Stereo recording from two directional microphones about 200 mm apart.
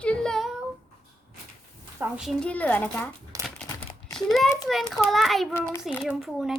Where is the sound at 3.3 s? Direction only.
15° right (ahead or behind).